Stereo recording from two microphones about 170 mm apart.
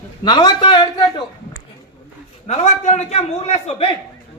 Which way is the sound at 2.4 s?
45° left (ahead or behind).